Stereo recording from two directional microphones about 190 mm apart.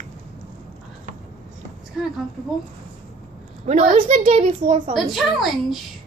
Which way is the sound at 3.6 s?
35° right (ahead or behind).